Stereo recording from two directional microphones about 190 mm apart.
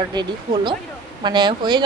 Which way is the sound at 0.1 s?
25° right (ahead or behind).